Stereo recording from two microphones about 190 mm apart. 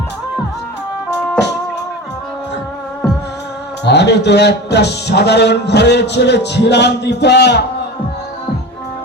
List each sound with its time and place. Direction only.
3.8 s a man's voice: 65° left (ahead or behind)